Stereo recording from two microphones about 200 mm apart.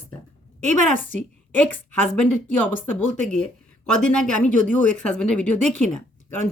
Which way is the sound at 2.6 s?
10° left (ahead or behind).